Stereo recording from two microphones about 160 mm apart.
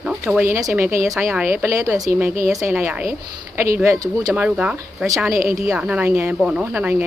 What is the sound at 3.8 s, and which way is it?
Speech, 20° right (ahead or behind).